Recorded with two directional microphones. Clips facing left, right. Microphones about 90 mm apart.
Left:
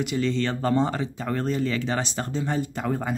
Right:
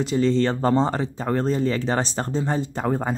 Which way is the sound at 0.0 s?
35° right (ahead or behind).